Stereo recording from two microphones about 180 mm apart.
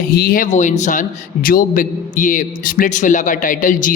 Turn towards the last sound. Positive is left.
turn(degrees=45)  # may be behind; listen again after turning